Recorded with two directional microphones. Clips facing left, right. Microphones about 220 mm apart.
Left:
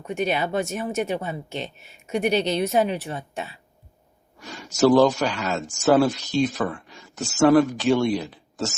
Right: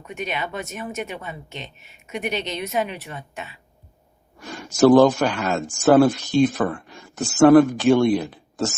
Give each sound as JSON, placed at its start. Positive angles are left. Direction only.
{"t": 0.2, "sound": "speech", "side_deg": 35}
{"t": 4.4, "sound": "speech", "side_deg": -50}